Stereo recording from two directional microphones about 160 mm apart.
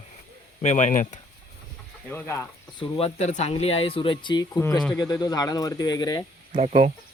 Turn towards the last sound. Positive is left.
turn(degrees=-50)  # may be behind; listen again after turning